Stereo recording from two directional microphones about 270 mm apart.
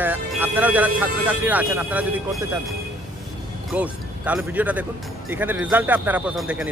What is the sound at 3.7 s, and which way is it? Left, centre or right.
A man's voice, centre.